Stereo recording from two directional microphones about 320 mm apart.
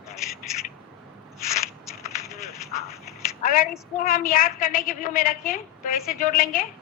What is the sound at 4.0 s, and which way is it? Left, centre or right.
A woman's voice, left.